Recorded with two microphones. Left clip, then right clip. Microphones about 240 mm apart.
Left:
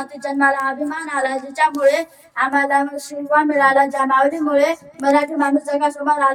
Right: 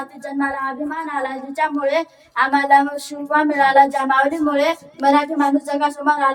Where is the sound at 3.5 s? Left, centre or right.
Centre.